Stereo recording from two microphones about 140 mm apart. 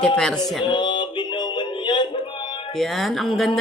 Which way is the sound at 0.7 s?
35° left (ahead or behind).